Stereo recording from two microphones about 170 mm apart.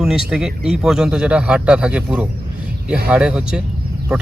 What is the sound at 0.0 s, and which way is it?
Speech, centre (ahead or behind).